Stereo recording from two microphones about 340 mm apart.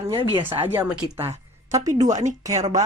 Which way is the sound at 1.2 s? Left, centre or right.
Centre.